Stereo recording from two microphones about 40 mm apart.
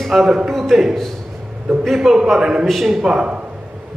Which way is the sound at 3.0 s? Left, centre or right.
Right.